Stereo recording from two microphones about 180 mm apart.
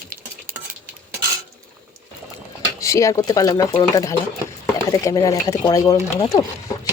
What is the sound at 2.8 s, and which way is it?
Speech, 15° left (ahead or behind).